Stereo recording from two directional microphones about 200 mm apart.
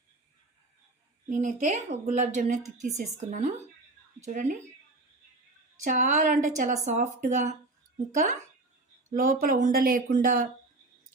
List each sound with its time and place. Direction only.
1.3 s a woman's voice: 35° right (ahead or behind)
5.8 s a woman's voice: 35° right (ahead or behind)